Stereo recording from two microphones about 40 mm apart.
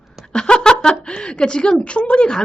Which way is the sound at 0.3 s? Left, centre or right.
Left.